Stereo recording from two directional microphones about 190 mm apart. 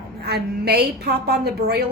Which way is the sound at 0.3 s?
60° right (ahead or behind).